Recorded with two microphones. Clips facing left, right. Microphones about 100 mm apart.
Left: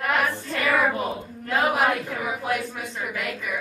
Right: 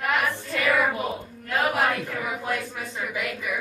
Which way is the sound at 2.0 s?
20° left (ahead or behind).